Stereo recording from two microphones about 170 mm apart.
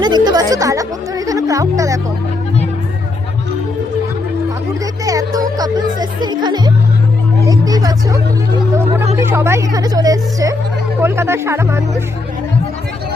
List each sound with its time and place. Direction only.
0.0 s a woman's voice: 25° right (ahead or behind)
5.0 s a woman's voice: 20° right (ahead or behind)